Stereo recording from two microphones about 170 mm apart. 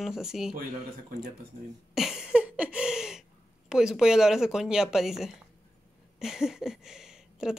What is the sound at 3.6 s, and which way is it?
Speech, 5° right (ahead or behind).